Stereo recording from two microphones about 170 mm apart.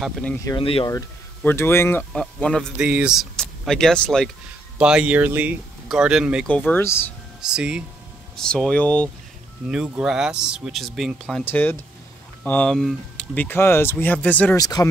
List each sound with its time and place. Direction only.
0.0 s speech: 5° left (ahead or behind)
0.6 s speech: 35° left (ahead or behind)
0.8 s speech: 15° left (ahead or behind)
2.8 s speech: 5° right (ahead or behind)
6.4 s speech: 10° left (ahead or behind)
7.4 s speech: 5° right (ahead or behind)
9.7 s speech: 5° right (ahead or behind)
11.4 s speech: 10° left (ahead or behind)
14.6 s speech: 20° left (ahead or behind)